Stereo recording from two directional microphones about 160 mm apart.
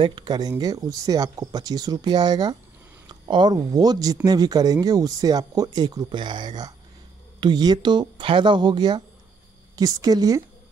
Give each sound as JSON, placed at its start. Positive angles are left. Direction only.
{"t": 0.0, "sound": "speech", "side_deg": -30}